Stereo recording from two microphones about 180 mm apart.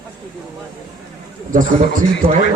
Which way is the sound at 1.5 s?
50° right (ahead or behind).